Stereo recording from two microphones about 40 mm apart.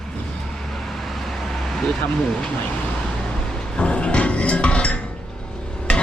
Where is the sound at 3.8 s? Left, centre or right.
Left.